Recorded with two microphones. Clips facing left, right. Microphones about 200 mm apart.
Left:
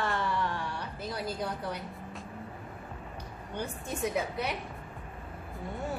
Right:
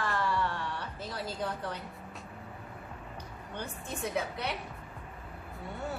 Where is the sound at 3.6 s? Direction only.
15° left (ahead or behind).